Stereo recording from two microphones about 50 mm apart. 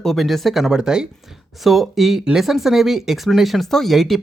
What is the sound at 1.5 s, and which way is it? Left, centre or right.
Speech, centre.